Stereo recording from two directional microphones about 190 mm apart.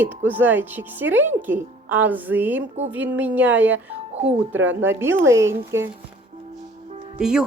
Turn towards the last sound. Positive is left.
turn(degrees=-5)  # may be behind; listen again after turning